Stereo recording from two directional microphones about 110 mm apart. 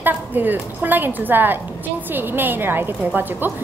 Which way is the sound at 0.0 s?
15° right (ahead or behind).